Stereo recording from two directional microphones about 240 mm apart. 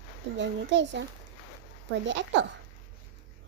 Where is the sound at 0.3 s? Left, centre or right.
Right.